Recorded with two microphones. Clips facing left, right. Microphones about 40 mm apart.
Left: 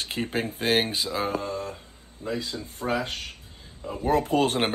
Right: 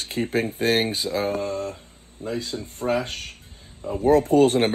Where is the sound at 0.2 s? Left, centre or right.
Left.